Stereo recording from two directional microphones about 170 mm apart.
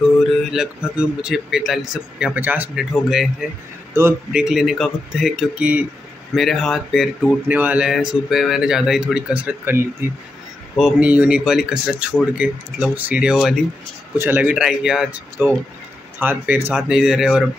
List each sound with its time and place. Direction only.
0.3 s speech: centre (ahead or behind)
3.9 s speech: 15° right (ahead or behind)
4.3 s speech: 5° right (ahead or behind)